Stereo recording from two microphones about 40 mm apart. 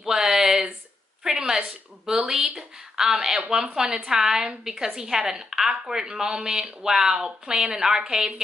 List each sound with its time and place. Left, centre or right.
0.0 s a sound: centre
1.2 s a woman's voice: centre
1.6 s a woman's voice: right